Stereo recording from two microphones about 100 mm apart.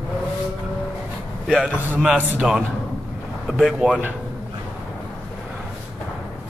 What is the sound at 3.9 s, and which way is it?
Speech, 20° right (ahead or behind).